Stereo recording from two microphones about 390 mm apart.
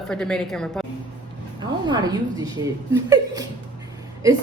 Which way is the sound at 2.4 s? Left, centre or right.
Centre.